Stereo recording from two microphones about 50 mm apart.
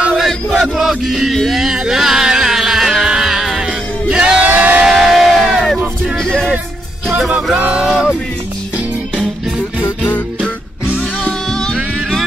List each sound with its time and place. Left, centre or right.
0.3 s music: centre
1.6 s a sound: centre
3.1 s music: centre
4.1 s crowd: centre
4.4 s music: right
4.8 s music: centre
6.1 s music: centre
7.7 s a sound: centre
11.5 s music: centre